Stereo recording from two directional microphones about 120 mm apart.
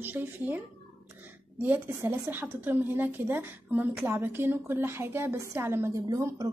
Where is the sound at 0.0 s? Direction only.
15° right (ahead or behind).